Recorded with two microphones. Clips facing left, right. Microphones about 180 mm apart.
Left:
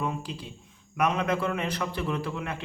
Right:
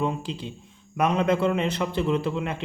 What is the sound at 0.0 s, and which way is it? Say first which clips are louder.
A man's voice: right 5 dB; 25° right (ahead or behind).